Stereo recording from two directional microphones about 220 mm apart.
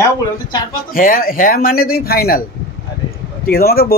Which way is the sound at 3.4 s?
45° left (ahead or behind).